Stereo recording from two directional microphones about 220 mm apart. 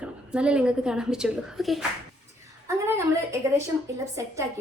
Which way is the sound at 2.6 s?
10° right (ahead or behind).